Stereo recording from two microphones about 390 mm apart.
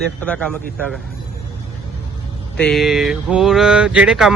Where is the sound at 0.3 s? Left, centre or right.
Centre.